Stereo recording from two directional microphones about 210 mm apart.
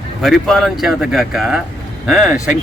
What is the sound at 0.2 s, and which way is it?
Speech, centre (ahead or behind).